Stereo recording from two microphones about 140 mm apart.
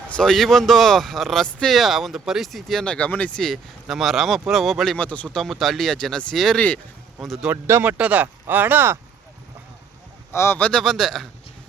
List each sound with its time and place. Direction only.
0.1 s speech: 5° left (ahead or behind)
7.4 s speech: 15° right (ahead or behind)
10.3 s speech: 20° left (ahead or behind)
10.6 s speech: 5° left (ahead or behind)